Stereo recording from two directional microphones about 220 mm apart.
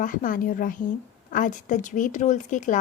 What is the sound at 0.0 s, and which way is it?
Speech, 35° left (ahead or behind).